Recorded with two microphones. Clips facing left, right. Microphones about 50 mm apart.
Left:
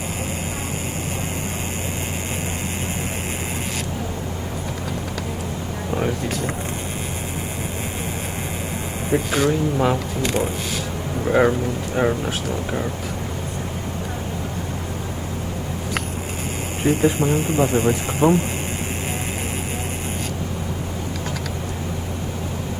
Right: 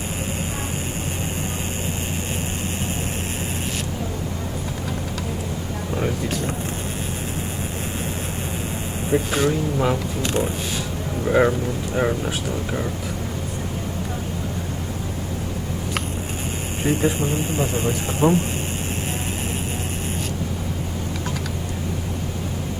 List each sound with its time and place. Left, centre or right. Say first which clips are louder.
5.9 s vehicle: left 2 dB; centre
9.1 s speech: left 1 dB; centre
11.3 s speech: left 1 dB; centre
17.0 s speech: left 3 dB; left